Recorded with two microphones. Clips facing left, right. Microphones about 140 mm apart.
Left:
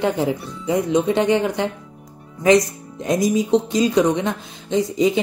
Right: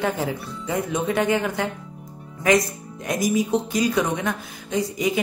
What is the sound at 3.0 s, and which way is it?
Speech, 20° left (ahead or behind).